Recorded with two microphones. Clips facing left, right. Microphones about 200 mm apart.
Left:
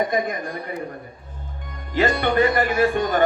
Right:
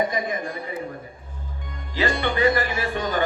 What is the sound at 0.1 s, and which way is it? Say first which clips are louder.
Speech: left 3 dB; 45° left (ahead or behind).